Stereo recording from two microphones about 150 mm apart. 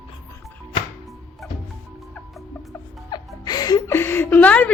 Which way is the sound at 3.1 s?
25° left (ahead or behind).